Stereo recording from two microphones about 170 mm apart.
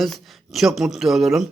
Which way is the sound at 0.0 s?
Centre (ahead or behind).